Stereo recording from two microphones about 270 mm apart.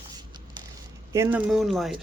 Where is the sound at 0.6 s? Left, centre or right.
Centre.